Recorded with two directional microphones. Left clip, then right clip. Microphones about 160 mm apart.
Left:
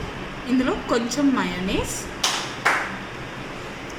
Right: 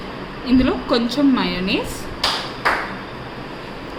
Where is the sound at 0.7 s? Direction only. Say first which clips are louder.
Right 3 dB; 25° right (ahead or behind).